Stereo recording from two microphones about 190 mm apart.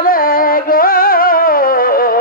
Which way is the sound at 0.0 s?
50° left (ahead or behind).